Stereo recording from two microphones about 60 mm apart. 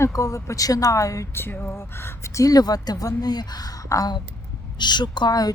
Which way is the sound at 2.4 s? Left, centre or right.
Left.